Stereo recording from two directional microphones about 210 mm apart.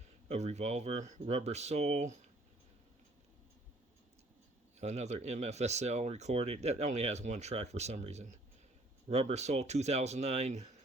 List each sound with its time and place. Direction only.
0.3 s speech: 30° right (ahead or behind)
4.8 s speech: 30° right (ahead or behind)